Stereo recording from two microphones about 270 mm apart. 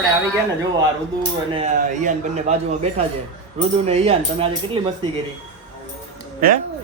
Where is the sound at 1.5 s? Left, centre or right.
Right.